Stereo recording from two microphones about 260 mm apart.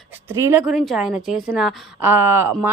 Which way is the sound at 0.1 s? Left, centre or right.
Centre.